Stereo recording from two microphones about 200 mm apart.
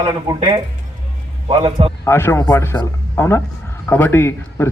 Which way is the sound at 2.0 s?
10° left (ahead or behind).